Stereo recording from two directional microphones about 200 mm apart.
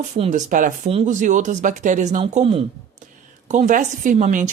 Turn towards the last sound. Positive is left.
turn(degrees=-40)  # may be behind; listen again after turning